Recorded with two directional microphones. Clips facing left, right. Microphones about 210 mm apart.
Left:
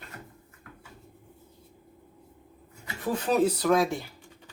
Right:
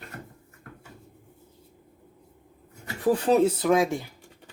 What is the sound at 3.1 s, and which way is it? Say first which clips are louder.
Speech: right 3 dB; 30° right (ahead or behind).